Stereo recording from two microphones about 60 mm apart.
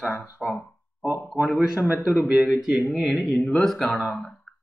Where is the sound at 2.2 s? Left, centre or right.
Centre.